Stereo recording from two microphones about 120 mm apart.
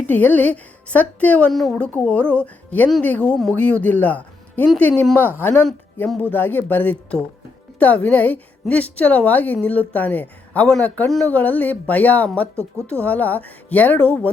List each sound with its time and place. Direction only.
0.1 s a woman's voice: 15° left (ahead or behind)
1.5 s a woman's voice: centre (ahead or behind)
1.9 s a woman's voice: 15° left (ahead or behind)